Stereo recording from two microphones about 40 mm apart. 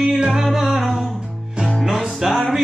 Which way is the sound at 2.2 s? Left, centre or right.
Centre.